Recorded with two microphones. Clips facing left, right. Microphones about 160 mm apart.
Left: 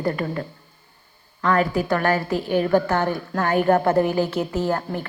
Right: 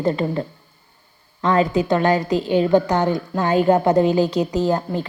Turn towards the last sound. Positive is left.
turn(degrees=-15)  # may be behind; listen again after turning